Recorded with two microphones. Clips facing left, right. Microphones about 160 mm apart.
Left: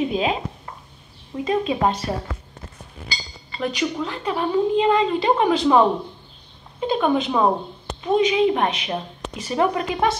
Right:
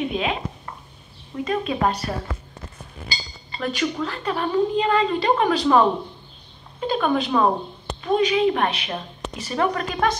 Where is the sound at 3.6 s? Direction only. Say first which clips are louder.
Left 1 dB; 15° left (ahead or behind).